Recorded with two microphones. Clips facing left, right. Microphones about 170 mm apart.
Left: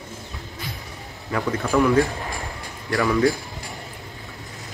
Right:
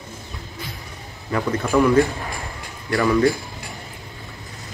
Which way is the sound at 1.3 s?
Centre (ahead or behind).